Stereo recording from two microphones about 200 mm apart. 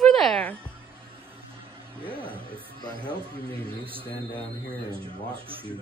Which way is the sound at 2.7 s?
20° left (ahead or behind).